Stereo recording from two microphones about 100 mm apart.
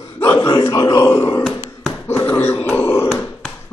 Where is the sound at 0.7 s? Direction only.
40° left (ahead or behind).